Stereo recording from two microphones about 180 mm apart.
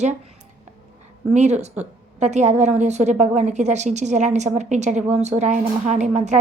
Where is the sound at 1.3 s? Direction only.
40° right (ahead or behind).